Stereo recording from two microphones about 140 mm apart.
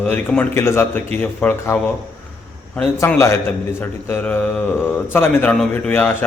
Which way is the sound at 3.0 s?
15° left (ahead or behind).